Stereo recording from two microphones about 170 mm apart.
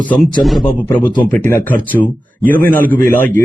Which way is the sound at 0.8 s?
10° left (ahead or behind).